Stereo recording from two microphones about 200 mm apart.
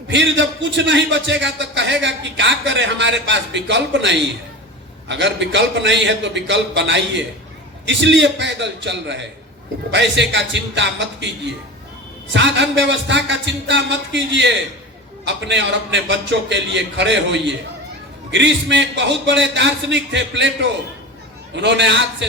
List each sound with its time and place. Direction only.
0.1 s a man's voice: 65° right (ahead or behind)
12.3 s a man's voice: 65° right (ahead or behind)